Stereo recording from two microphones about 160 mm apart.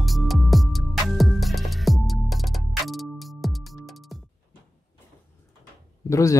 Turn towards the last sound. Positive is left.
turn(degrees=20)  # may be behind; listen again after turning